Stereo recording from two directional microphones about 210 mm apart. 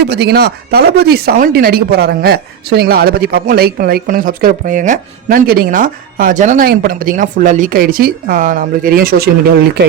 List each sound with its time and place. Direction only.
0.0 s speech: 50° right (ahead or behind)